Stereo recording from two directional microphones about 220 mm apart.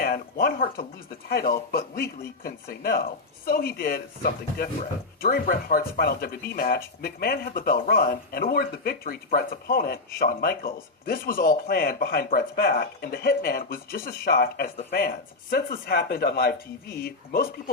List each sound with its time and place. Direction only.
0.0 s speech: 40° left (ahead or behind)